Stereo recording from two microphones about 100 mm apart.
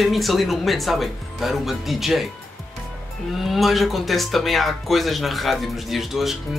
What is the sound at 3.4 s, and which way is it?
Speech, centre (ahead or behind).